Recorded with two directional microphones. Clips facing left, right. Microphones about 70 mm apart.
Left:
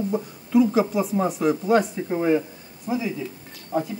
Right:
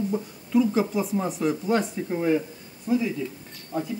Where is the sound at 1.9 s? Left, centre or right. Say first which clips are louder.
Left 2 dB; centre.